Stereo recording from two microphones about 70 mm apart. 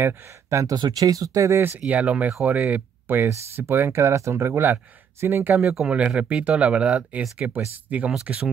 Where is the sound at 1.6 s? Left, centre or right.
Right.